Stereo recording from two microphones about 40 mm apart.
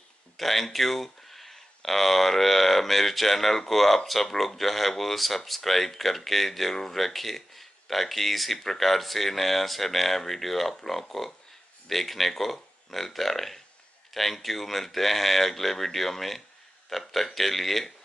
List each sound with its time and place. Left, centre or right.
0.4 s speech: centre